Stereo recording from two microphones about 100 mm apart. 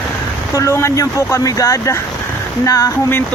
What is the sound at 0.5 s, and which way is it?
Speech, 30° left (ahead or behind).